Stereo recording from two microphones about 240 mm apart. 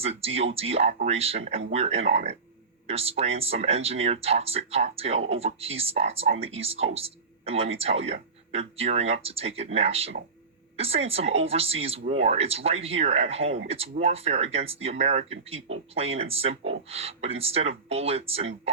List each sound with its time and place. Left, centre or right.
0.0 s speech: right